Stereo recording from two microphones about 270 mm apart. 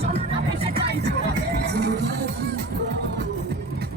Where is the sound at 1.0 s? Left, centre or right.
Right.